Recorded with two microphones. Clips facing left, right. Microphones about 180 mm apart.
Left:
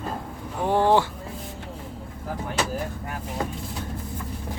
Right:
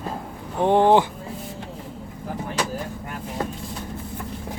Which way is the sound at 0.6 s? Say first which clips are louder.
Right 4 dB; 20° right (ahead or behind).